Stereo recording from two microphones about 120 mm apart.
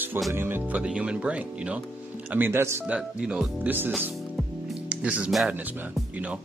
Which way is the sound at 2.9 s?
10° right (ahead or behind).